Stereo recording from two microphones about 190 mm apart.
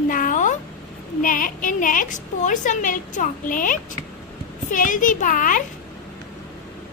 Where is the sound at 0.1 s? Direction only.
45° left (ahead or behind).